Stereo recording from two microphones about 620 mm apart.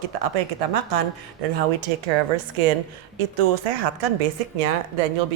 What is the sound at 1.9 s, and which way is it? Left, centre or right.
Speech, right.